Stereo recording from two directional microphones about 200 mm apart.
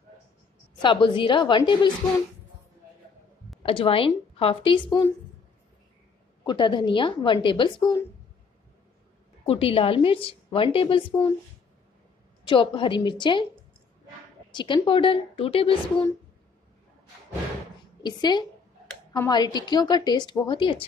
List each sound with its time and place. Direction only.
0.8 s a woman's voice: 25° left (ahead or behind)
3.6 s a woman's voice: 25° left (ahead or behind)
6.4 s a woman's voice: 25° left (ahead or behind)
9.5 s a woman's voice: 30° left (ahead or behind)
12.4 s a woman's voice: 25° left (ahead or behind)
14.5 s a woman's voice: 25° left (ahead or behind)
18.0 s a woman's voice: 20° left (ahead or behind)